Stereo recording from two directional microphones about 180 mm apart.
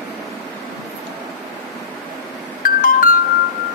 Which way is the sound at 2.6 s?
50° left (ahead or behind).